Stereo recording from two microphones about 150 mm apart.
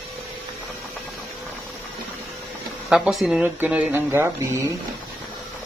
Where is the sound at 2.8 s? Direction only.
5° right (ahead or behind).